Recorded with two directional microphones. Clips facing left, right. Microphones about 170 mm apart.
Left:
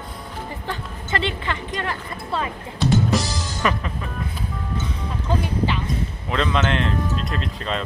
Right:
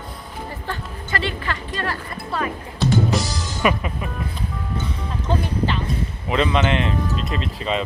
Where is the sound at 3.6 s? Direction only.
10° right (ahead or behind).